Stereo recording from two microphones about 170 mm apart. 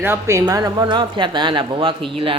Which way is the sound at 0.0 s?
15° right (ahead or behind).